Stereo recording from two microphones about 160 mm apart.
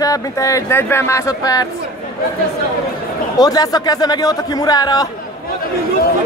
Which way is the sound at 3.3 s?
25° left (ahead or behind).